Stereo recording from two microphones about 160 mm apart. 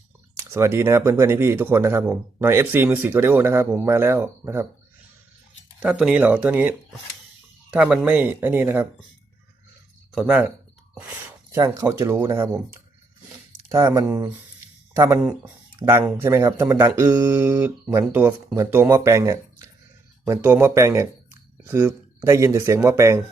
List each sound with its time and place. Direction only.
0.3 s speech: 15° right (ahead or behind)
5.8 s speech: 5° right (ahead or behind)
10.2 s speech: 10° right (ahead or behind)
11.5 s speech: 20° right (ahead or behind)
13.7 s speech: 20° right (ahead or behind)